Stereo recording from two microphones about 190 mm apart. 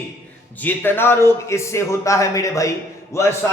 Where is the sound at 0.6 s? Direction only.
10° left (ahead or behind).